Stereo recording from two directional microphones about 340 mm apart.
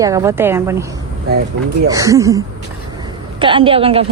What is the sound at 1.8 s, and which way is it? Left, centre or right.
Speech, centre.